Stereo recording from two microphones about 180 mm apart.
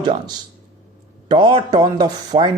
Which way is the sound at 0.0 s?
25° right (ahead or behind).